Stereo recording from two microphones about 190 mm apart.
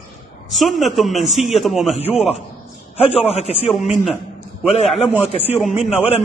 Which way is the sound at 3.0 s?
35° left (ahead or behind).